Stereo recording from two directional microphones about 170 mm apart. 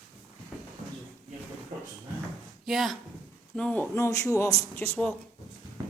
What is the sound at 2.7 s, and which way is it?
A woman's voice, centre (ahead or behind).